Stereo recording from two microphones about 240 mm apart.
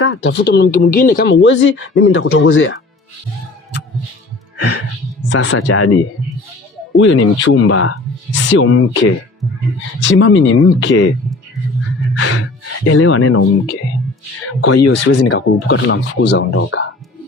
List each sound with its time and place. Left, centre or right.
0.0 s speech: left
4.5 s music: left
5.3 s speech: left
6.9 s speech: left
12.1 s gasp: left
12.8 s speech: left
14.7 s speech: left
14.9 s speech: left